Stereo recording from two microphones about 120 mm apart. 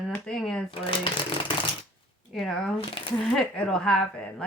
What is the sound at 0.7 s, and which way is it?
Speech, 45° left (ahead or behind).